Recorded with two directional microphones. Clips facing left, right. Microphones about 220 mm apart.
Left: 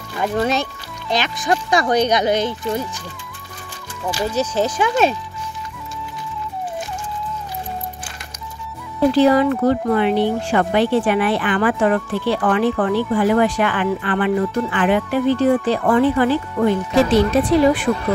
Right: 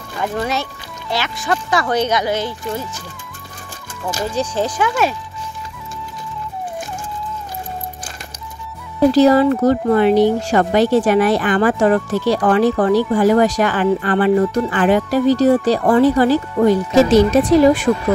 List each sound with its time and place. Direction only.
0.2 s speech: 20° left (ahead or behind)
4.4 s speech: 15° right (ahead or behind)
4.7 s speech: 25° left (ahead or behind)
9.1 s a woman's voice: 40° right (ahead or behind)